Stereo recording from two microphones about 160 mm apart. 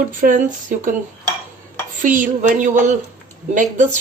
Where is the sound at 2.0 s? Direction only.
55° right (ahead or behind).